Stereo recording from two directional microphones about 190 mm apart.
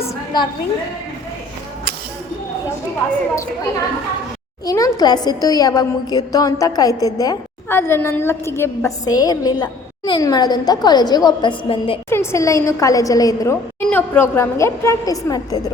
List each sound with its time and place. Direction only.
0.3 s a woman's voice: 25° left (ahead or behind)
4.6 s a woman's voice: 15° left (ahead or behind)
12.0 s a woman's voice: 15° left (ahead or behind)